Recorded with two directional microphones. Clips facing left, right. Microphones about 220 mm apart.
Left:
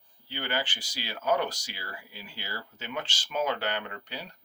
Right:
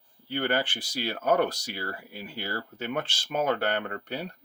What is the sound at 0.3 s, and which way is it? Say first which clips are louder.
Speech: right 6 dB; 55° right (ahead or behind).